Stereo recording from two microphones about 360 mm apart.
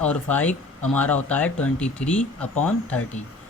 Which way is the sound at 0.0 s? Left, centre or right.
Centre.